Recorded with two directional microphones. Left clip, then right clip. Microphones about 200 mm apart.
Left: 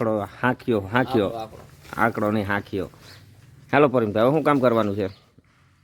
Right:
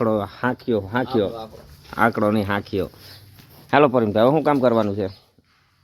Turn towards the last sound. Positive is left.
turn(degrees=5)  # may be behind; listen again after turning